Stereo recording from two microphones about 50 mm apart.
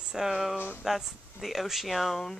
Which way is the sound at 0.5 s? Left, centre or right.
Left.